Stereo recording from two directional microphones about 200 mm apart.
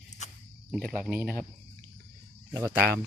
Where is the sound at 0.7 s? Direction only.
5° right (ahead or behind).